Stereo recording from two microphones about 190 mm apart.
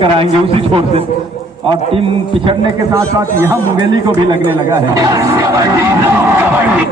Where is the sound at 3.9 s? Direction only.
25° right (ahead or behind).